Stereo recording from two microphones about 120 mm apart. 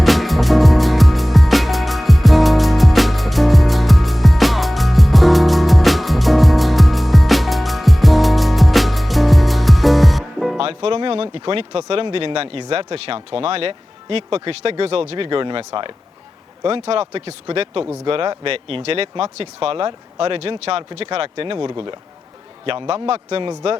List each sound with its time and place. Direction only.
0.0 s music: centre (ahead or behind)
10.6 s speech: 50° right (ahead or behind)